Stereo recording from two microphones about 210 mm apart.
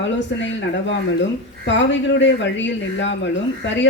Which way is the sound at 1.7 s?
60° left (ahead or behind).